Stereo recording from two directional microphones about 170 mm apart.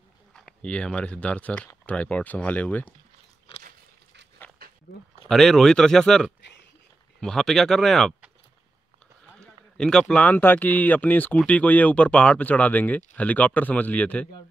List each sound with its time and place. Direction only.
0.3 s speech: 5° left (ahead or behind)
4.6 s dog: 60° right (ahead or behind)
5.3 s speech: centre (ahead or behind)
9.3 s speech: 5° left (ahead or behind)